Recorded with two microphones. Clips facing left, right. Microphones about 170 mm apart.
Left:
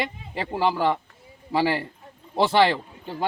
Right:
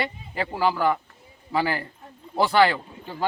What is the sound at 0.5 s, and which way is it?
Speech, 25° left (ahead or behind).